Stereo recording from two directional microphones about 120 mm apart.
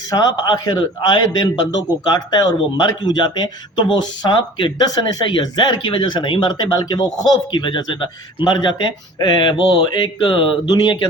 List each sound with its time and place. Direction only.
0.1 s a man's voice: 35° left (ahead or behind)